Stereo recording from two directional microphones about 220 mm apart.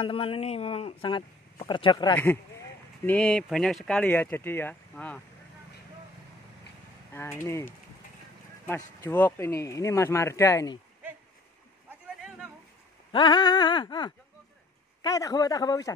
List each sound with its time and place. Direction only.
0.0 s speech: 25° left (ahead or behind)
2.1 s speech: 10° left (ahead or behind)
7.2 s speech: 10° left (ahead or behind)
13.1 s speech: 20° left (ahead or behind)